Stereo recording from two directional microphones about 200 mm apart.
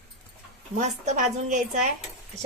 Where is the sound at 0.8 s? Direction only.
35° right (ahead or behind).